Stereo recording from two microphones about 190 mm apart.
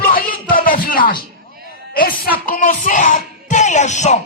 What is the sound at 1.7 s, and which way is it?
Speech, 50° left (ahead or behind).